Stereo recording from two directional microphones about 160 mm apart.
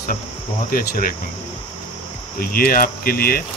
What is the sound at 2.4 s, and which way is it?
Speech, 65° left (ahead or behind).